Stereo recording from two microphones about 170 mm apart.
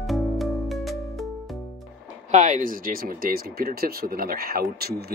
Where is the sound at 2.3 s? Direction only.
45° right (ahead or behind).